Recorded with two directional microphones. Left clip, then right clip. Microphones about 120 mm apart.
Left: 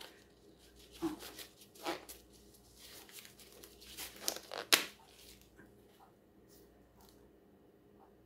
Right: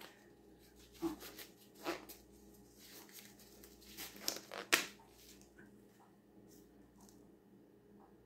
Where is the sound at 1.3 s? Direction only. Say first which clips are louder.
Left 3 dB; 35° left (ahead or behind).